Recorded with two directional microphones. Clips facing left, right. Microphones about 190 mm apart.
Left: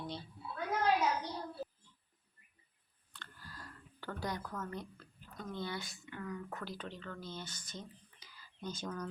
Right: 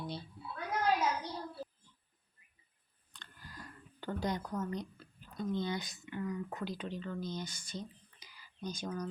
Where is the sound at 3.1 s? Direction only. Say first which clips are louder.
Right 1 dB; 15° right (ahead or behind).